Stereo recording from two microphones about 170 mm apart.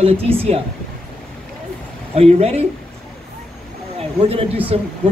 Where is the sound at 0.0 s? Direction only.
35° right (ahead or behind).